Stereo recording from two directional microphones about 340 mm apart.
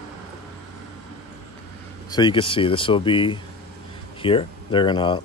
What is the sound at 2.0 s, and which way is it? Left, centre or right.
Speech, centre.